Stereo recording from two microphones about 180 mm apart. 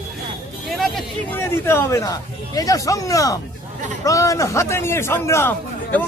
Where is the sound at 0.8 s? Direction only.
Centre (ahead or behind).